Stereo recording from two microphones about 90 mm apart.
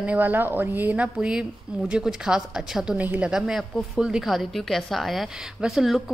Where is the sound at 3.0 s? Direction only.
20° right (ahead or behind).